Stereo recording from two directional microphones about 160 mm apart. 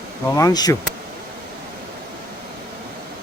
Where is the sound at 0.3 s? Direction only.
25° left (ahead or behind).